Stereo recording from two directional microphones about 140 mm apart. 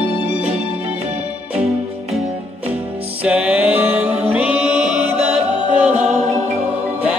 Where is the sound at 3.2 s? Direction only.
5° right (ahead or behind).